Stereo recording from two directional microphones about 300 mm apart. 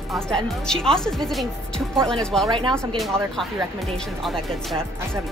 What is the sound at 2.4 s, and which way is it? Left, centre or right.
Speech, centre.